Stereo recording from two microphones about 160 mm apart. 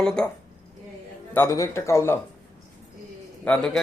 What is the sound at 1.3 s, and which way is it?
Speech, 15° left (ahead or behind).